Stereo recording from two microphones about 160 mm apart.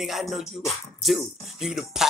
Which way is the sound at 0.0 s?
Centre (ahead or behind).